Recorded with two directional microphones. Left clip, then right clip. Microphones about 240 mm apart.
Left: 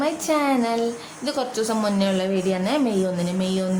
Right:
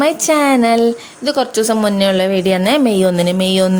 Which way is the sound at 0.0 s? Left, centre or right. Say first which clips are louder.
Right 9 dB; right.